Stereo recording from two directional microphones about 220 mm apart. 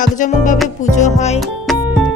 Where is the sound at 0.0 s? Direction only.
35° left (ahead or behind).